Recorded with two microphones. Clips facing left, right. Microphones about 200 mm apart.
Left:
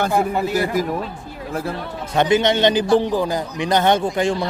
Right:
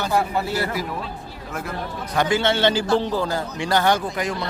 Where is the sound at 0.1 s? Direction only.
15° left (ahead or behind).